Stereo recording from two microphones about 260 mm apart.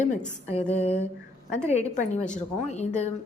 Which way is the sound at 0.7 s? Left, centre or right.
Left.